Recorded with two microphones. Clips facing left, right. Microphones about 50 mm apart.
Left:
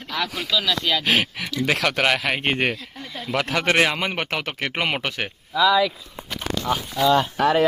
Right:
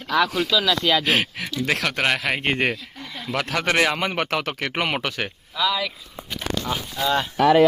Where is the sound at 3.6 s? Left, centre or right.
Left.